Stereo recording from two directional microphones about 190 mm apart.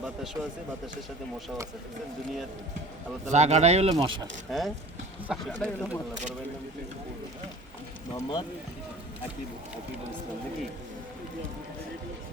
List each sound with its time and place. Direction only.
3.2 s speech: 35° right (ahead or behind)
4.5 s speech: centre (ahead or behind)
8.1 s speech: 20° left (ahead or behind)